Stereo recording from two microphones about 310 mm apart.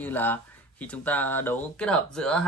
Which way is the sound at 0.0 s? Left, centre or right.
Centre.